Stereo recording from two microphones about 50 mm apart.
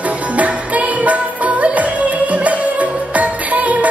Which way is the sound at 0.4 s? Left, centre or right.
Right.